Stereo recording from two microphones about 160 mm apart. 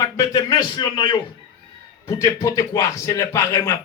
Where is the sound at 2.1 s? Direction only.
15° left (ahead or behind).